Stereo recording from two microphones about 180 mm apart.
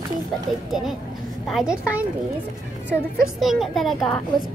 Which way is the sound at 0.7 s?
Centre (ahead or behind).